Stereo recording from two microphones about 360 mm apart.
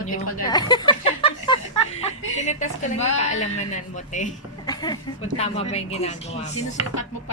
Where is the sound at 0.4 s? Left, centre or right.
Centre.